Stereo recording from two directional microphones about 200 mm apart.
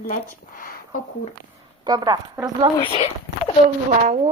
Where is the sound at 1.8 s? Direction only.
20° right (ahead or behind).